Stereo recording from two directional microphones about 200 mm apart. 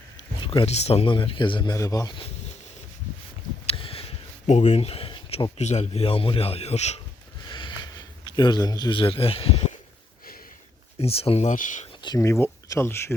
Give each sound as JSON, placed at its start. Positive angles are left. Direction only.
{"t": 0.4, "sound": "speech", "side_deg": 25}
{"t": 3.7, "sound": "speech", "side_deg": 30}
{"t": 7.4, "sound": "a sound", "side_deg": 25}
{"t": 11.0, "sound": "speech", "side_deg": 30}
{"t": 12.0, "sound": "speech", "side_deg": 15}